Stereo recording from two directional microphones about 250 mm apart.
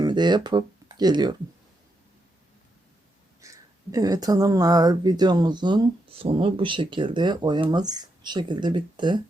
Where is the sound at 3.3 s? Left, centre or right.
Centre.